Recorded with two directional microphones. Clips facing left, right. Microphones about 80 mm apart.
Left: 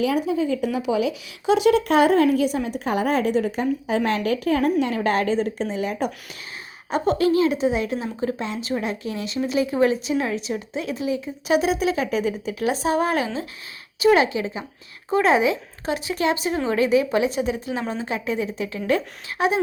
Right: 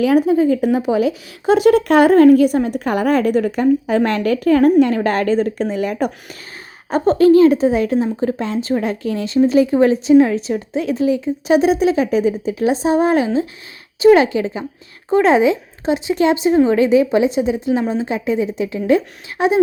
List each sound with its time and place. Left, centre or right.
0.0 s speech: right
6.9 s a woman's voice: right